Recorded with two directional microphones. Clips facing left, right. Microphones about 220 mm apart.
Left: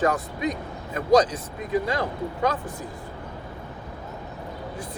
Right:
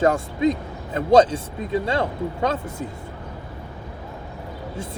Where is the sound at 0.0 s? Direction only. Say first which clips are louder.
Right 5 dB; 25° right (ahead or behind).